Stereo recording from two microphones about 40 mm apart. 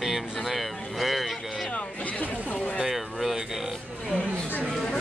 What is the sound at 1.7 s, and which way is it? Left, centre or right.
Speech, left.